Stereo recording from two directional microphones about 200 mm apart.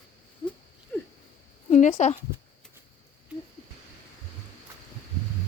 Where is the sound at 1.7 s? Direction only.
35° left (ahead or behind).